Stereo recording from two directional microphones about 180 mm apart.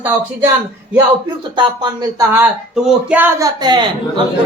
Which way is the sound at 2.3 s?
5° right (ahead or behind).